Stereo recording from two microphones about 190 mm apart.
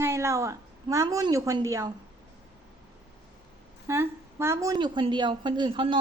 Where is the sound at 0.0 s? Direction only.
15° right (ahead or behind).